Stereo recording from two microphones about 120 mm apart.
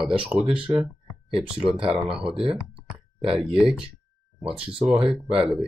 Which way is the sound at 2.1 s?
5° right (ahead or behind).